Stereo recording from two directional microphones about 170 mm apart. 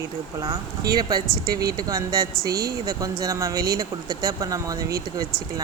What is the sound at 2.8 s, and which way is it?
Speech, 20° right (ahead or behind).